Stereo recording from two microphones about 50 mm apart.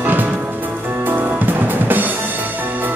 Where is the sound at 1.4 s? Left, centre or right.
Right.